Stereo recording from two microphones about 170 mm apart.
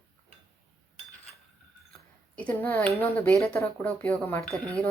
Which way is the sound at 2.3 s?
10° left (ahead or behind).